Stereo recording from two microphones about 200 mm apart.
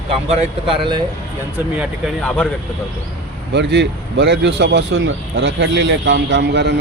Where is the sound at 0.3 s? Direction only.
25° right (ahead or behind).